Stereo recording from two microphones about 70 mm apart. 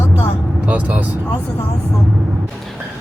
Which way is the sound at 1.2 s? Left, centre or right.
Left.